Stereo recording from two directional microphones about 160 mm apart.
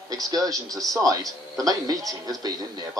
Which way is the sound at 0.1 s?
25° right (ahead or behind).